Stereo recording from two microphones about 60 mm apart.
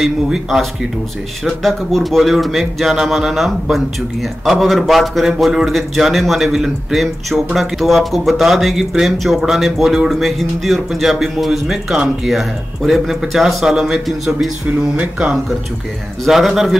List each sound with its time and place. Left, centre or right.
0.0 s speech: centre
1.4 s speech: centre
15.0 s speech: centre
16.3 s speech: centre